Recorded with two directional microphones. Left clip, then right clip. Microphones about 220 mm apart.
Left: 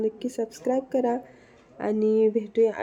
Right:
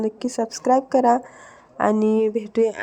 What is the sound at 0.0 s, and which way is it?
Speech, 25° right (ahead or behind).